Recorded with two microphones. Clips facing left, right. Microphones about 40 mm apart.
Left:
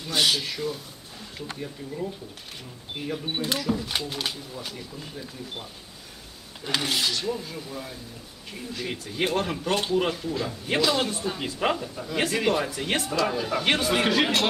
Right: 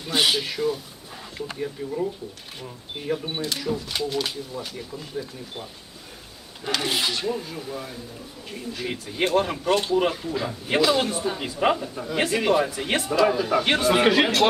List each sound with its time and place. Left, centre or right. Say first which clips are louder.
0.1 s speech: right 2 dB; centre
3.3 s speech: even; centre
6.8 s speech: right 2 dB; centre